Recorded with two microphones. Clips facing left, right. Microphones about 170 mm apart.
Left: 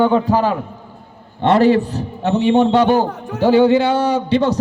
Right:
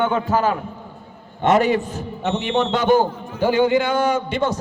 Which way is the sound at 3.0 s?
75° left (ahead or behind).